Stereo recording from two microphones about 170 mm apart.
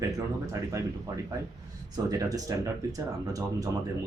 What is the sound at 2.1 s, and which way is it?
Speech, 20° right (ahead or behind).